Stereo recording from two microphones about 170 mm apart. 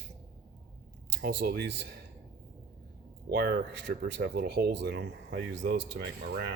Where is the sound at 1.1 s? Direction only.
80° right.